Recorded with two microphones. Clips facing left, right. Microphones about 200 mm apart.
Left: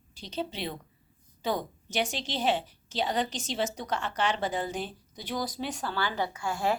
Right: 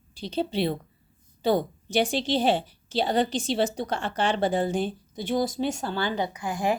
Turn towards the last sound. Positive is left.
turn(degrees=-15)  # may be behind; listen again after turning